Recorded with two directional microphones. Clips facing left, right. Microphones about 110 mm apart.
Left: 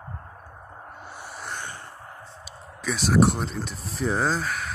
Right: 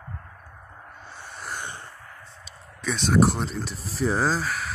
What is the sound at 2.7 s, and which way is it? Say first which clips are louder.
Speech: even; 5° left (ahead or behind).